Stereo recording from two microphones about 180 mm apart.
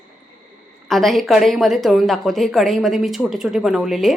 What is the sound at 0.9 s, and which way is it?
A woman's voice, centre (ahead or behind).